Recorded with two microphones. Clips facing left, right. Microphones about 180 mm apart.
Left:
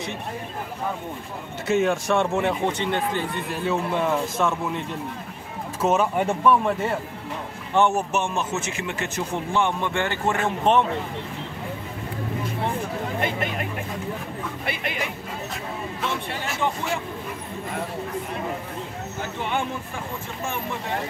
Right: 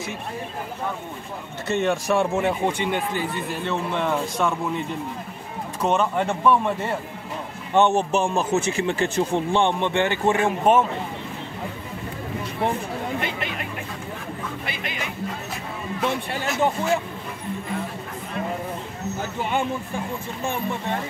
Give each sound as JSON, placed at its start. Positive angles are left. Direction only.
{"t": 1.7, "sound": "a man's voice", "side_deg": 0}
{"t": 7.7, "sound": "speech", "side_deg": -20}
{"t": 8.1, "sound": "speech", "side_deg": -30}
{"t": 13.2, "sound": "speech", "side_deg": 50}